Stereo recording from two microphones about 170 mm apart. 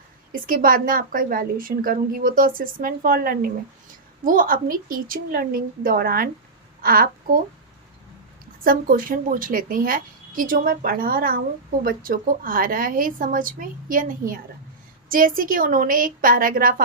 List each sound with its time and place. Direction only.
0.4 s a woman's voice: 55° right (ahead or behind)
8.6 s a woman's voice: 55° right (ahead or behind)